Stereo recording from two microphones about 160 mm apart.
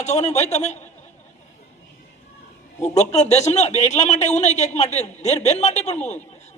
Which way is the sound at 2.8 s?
45° left (ahead or behind).